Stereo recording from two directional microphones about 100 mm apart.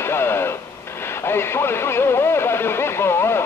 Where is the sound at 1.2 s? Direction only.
25° left (ahead or behind).